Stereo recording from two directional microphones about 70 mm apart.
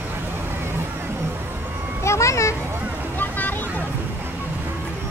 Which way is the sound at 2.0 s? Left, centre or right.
Left.